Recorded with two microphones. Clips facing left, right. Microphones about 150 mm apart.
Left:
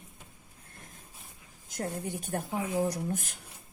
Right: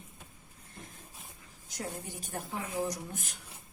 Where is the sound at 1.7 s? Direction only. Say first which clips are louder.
Left 5 dB; 55° left (ahead or behind).